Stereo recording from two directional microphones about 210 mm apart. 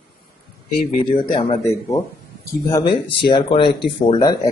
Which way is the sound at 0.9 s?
25° left (ahead or behind).